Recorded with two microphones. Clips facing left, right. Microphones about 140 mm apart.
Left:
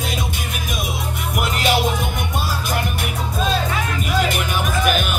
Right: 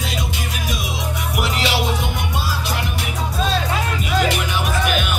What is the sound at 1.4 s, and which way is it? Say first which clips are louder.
Music: left 2 dB; 50° left (ahead or behind).